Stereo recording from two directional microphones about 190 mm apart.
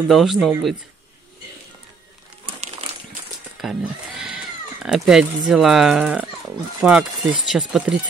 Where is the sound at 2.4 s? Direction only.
30° right (ahead or behind).